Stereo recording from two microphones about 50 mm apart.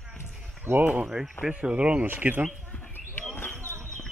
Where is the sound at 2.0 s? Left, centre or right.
Right.